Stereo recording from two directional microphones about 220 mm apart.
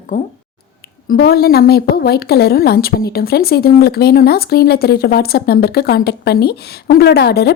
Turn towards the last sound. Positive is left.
turn(degrees=50)  # may be behind; listen again after turning